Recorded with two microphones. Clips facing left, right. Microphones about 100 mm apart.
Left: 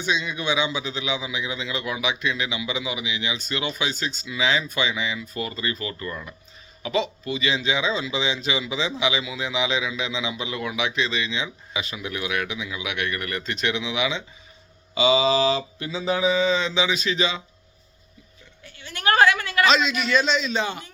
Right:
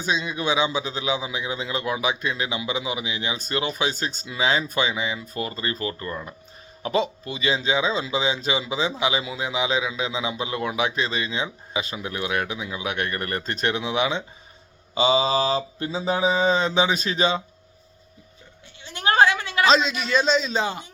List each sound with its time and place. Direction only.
0.0 s speech: 35° right (ahead or behind)
18.6 s a sound: 25° right (ahead or behind)
19.6 s speech: 35° right (ahead or behind)